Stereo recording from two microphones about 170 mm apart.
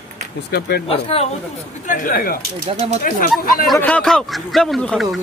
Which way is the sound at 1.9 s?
50° left (ahead or behind).